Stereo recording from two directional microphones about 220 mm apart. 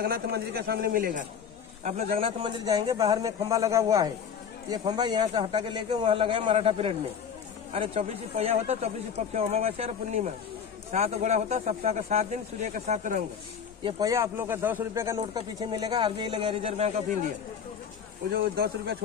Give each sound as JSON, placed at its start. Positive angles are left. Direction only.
{"t": 0.0, "sound": "a man's voice", "side_deg": -45}
{"t": 13.8, "sound": "speech", "side_deg": -20}
{"t": 18.3, "sound": "a man's voice", "side_deg": -45}